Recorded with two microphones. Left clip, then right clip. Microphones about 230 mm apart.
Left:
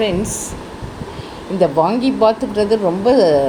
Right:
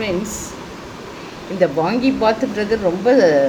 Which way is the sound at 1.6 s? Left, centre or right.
Left.